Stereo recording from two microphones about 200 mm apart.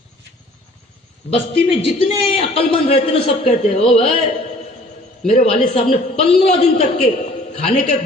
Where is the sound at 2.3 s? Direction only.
30° left (ahead or behind).